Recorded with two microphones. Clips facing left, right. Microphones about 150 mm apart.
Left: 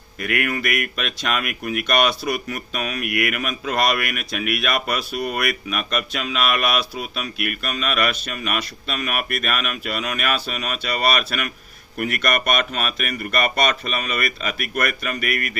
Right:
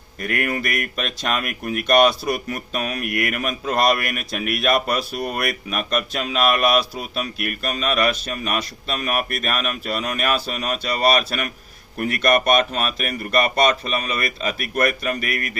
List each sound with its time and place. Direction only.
0.2 s speech: 35° right (ahead or behind)
15.2 s speech: 55° left (ahead or behind)